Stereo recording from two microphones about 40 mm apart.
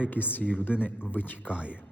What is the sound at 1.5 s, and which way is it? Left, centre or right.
Speech, right.